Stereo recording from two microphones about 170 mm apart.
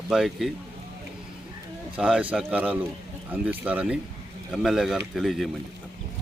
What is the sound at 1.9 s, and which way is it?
Speech, 5° right (ahead or behind).